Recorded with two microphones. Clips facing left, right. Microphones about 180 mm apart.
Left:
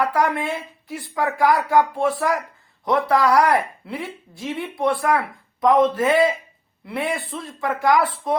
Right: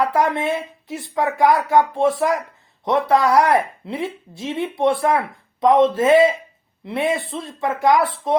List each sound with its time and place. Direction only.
0.0 s speech: 25° right (ahead or behind)